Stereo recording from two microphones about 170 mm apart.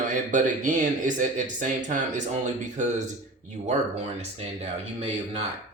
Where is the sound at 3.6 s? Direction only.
40° right (ahead or behind).